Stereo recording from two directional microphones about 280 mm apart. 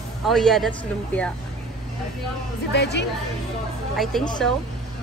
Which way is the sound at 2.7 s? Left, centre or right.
Left.